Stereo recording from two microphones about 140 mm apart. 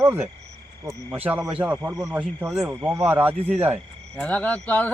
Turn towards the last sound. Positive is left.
turn(degrees=10)  # may be behind; listen again after turning